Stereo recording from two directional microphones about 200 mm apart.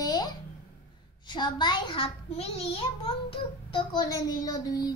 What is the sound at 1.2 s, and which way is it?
A child's voice, 20° left (ahead or behind).